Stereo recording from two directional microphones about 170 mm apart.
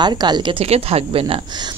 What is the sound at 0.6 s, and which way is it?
Speech, 35° right (ahead or behind).